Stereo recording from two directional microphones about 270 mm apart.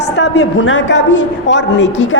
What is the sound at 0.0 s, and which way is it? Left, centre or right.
A woman's voice, left.